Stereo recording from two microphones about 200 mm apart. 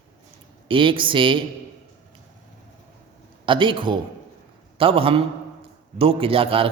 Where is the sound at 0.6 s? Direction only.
25° right (ahead or behind).